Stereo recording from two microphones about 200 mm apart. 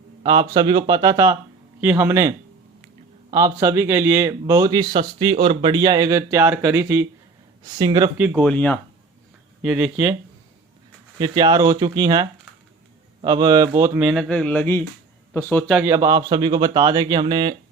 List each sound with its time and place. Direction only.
0.2 s speech: 25° right (ahead or behind)
3.3 s speech: 15° right (ahead or behind)
8.4 s speech: 5° left (ahead or behind)
9.6 s speech: 5° right (ahead or behind)
11.2 s speech: 20° right (ahead or behind)
14.3 s speech: 5° left (ahead or behind)
15.8 s speech: 15° right (ahead or behind)